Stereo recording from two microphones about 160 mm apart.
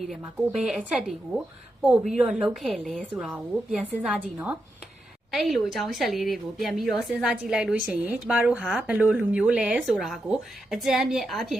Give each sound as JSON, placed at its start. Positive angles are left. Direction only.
{"t": 0.1, "sound": "a woman's voice", "side_deg": 0}
{"t": 5.3, "sound": "a woman's voice", "side_deg": 0}